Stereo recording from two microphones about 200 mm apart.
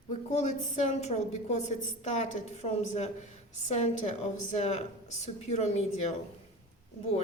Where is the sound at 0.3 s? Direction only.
35° left (ahead or behind).